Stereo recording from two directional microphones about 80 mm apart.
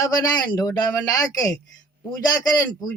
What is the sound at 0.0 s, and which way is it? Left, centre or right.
Speech, left.